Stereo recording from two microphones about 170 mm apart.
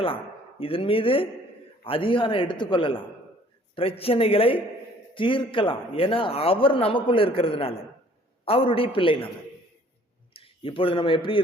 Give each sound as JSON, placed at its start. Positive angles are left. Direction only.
{"t": 0.6, "sound": "a man's voice", "side_deg": 35}
{"t": 10.3, "sound": "speech", "side_deg": 30}